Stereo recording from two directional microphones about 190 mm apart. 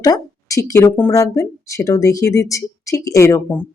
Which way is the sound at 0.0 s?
20° left (ahead or behind).